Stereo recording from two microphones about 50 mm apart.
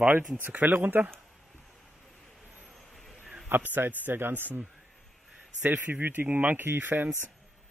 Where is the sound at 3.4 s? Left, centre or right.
Right.